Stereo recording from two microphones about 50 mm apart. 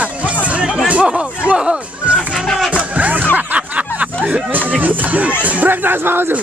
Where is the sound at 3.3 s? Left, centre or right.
Right.